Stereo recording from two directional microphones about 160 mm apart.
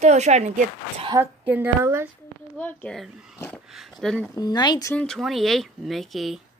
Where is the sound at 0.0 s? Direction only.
45° right (ahead or behind).